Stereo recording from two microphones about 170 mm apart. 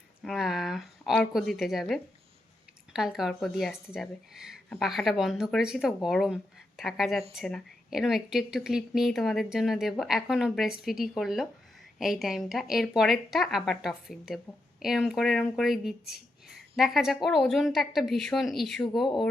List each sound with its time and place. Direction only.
0.3 s a woman's voice: centre (ahead or behind)